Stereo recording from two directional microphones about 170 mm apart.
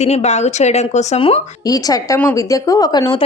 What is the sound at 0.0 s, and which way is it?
A woman's voice, 40° left (ahead or behind).